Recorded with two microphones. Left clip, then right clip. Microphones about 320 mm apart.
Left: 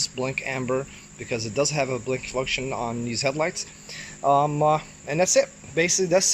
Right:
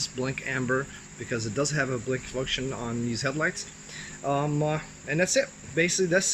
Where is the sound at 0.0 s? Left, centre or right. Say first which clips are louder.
Left 4 dB; centre.